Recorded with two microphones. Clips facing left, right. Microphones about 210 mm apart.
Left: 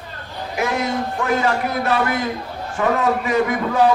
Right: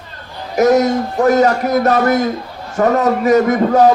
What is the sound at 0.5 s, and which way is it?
A man's voice, 40° right (ahead or behind).